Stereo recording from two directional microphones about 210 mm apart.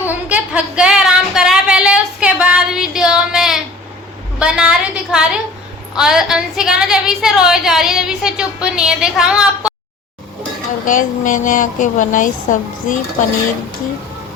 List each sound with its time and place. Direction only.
0.3 s a sound: 5° right (ahead or behind)
4.4 s a woman's voice: 5° right (ahead or behind)
10.8 s a woman's voice: 40° left (ahead or behind)